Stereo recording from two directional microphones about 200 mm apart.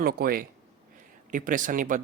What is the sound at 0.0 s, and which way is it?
Speech, 50° right (ahead or behind).